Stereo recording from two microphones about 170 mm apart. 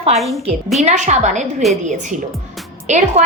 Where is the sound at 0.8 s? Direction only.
45° right (ahead or behind).